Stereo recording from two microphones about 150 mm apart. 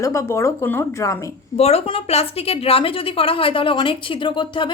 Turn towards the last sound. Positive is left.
turn(degrees=35)  # may be behind; listen again after turning